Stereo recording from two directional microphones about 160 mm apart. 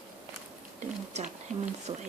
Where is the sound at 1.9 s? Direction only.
30° right (ahead or behind).